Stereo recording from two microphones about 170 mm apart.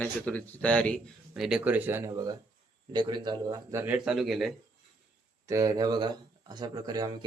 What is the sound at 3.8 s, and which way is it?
Speech, 5° right (ahead or behind).